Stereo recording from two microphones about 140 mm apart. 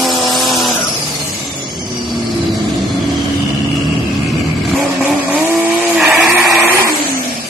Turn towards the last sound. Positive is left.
turn(degrees=0)  # may be behind; listen again after turning